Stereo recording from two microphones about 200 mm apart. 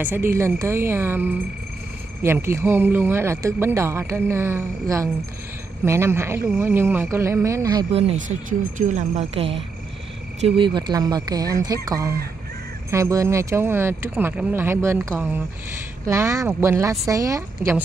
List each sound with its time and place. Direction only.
0.0 s speech: 10° right (ahead or behind)
8.5 s speech: 40° right (ahead or behind)
10.6 s speech: 20° right (ahead or behind)